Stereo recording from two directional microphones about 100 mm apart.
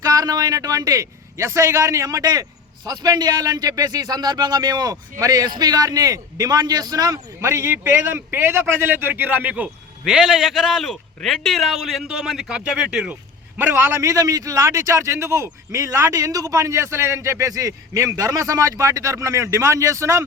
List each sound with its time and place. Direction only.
0.0 s a man's voice: 40° right (ahead or behind); by 13.1 s 10° right (ahead or behind)
13.6 s a man's voice: 20° right (ahead or behind)